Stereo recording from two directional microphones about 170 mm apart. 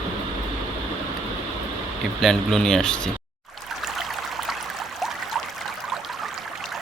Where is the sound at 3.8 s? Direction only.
Centre (ahead or behind).